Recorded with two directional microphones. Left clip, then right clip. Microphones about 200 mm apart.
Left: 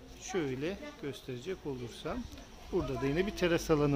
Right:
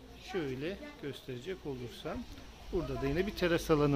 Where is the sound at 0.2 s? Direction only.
25° left (ahead or behind).